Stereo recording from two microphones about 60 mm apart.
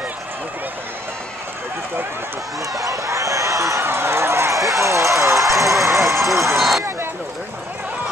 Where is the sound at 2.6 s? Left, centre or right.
Right.